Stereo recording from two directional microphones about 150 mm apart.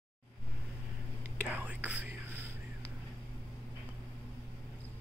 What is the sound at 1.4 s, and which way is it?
Whispering, 10° right (ahead or behind).